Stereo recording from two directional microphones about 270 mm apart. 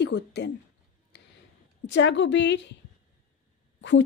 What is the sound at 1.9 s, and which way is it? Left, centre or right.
Speech, left.